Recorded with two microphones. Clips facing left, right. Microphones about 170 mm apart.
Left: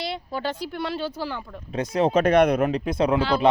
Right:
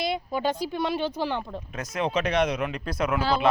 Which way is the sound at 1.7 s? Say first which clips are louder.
Left 8 dB; 30° left (ahead or behind).